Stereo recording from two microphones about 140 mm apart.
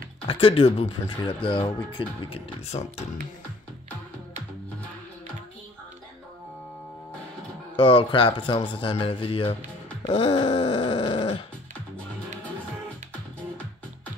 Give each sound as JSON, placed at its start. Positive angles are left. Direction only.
{"t": 0.3, "sound": "speech", "side_deg": 40}
{"t": 7.7, "sound": "speech", "side_deg": 40}
{"t": 10.0, "sound": "a sound", "side_deg": 40}